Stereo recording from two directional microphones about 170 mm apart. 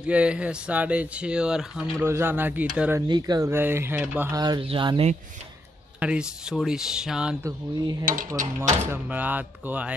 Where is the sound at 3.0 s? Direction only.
25° right (ahead or behind).